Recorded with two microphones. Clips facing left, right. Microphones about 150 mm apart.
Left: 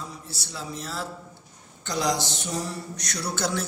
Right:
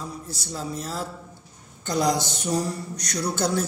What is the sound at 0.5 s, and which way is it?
A man's voice, 45° right (ahead or behind).